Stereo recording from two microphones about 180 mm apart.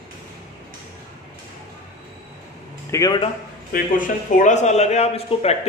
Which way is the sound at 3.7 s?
45° left (ahead or behind).